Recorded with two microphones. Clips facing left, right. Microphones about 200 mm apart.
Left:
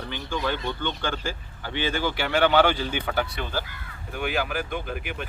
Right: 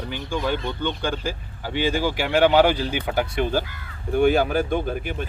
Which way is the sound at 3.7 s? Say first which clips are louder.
Right 12 dB; 45° right (ahead or behind).